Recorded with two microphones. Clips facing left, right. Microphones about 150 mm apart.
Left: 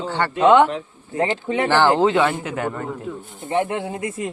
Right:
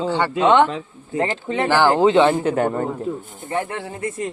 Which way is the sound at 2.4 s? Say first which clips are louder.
Right 6 dB; 30° right (ahead or behind).